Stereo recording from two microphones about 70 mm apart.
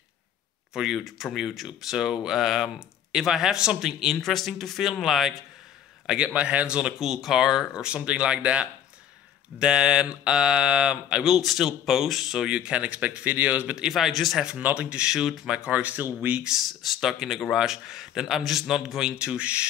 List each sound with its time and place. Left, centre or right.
0.7 s speech: centre
6.0 s speech: centre
12.4 s speech: centre
13.7 s speech: centre
14.6 s speech: centre
15.7 s speech: right
16.4 s speech: centre